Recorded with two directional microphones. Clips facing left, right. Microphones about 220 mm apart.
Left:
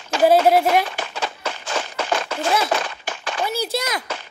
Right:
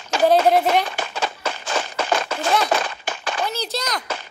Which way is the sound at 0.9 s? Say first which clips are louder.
Right 1 dB; 45° right (ahead or behind).